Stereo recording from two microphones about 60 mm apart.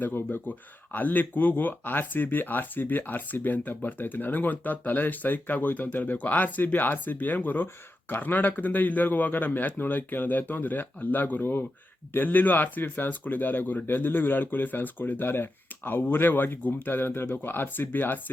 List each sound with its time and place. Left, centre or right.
0.0 s speech: left